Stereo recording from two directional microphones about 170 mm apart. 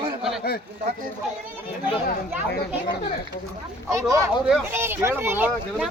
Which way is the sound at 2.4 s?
75° left (ahead or behind).